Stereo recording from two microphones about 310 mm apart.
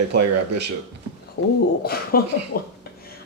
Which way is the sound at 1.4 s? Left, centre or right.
Left.